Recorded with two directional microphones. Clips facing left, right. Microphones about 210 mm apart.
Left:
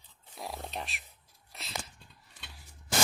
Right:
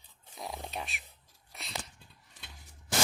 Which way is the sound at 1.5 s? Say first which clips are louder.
Even; centre (ahead or behind).